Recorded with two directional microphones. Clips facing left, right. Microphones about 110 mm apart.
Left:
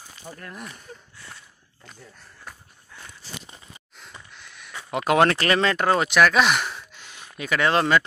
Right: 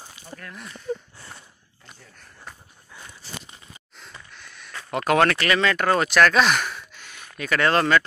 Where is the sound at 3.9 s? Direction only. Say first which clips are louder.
Right 1 dB; 10° left (ahead or behind).